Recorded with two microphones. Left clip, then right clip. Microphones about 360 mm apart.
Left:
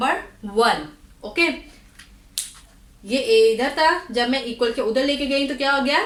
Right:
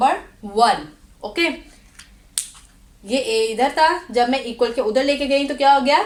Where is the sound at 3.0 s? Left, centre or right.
Centre.